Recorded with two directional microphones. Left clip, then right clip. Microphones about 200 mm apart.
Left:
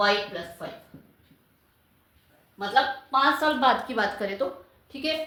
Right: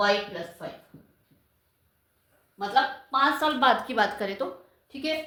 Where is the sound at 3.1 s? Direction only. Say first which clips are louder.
Left 2 dB; 30° right (ahead or behind).